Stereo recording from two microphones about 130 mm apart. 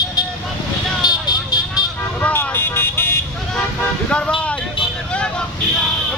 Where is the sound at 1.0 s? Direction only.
30° left (ahead or behind).